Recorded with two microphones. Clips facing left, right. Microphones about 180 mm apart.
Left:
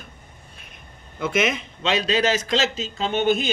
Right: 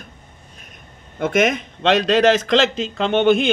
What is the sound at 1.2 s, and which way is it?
A man's voice, 50° right (ahead or behind).